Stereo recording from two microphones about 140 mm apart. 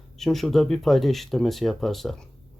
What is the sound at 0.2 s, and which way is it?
Speech, centre (ahead or behind).